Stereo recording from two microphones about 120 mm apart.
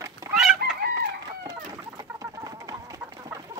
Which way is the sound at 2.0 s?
30° right (ahead or behind).